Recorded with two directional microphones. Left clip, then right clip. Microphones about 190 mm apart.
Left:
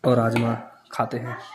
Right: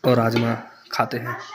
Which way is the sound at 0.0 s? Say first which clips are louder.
Right 2 dB; 5° left (ahead or behind).